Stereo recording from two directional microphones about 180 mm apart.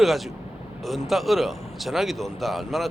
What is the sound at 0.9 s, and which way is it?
A man's voice, centre (ahead or behind).